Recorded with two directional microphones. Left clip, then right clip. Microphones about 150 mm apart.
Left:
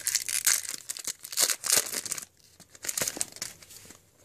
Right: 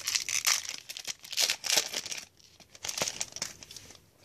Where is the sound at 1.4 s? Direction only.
45° left (ahead or behind).